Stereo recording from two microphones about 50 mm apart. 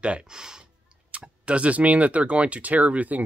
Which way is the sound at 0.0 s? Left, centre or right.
Centre.